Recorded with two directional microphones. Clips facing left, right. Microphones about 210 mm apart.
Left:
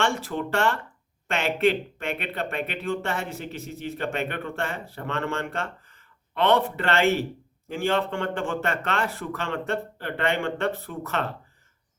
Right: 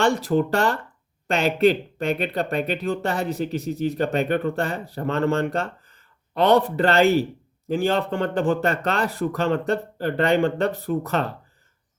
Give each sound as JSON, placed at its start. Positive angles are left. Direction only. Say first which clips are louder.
{"t": 0.0, "sound": "speech", "louder": "right 7 dB", "side_deg": -35}